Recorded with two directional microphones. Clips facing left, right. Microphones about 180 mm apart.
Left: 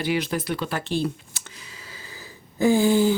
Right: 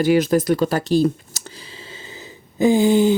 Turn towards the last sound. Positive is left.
turn(degrees=-20)  # may be behind; listen again after turning